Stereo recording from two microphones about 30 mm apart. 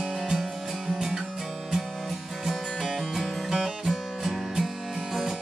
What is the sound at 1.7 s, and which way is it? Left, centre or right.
Music, centre.